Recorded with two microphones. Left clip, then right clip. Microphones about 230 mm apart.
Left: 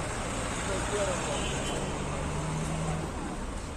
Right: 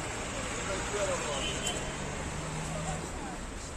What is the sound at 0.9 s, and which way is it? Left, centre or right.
Vehicle, left.